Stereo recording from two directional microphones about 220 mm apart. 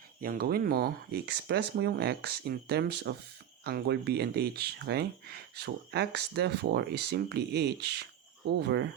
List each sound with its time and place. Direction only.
0.2 s speech: 40° right (ahead or behind)